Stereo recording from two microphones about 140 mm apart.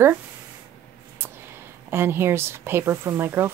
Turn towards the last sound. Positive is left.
turn(degrees=-15)  # may be behind; listen again after turning